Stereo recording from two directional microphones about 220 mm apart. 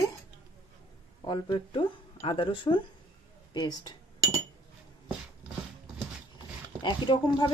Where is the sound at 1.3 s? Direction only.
20° left (ahead or behind).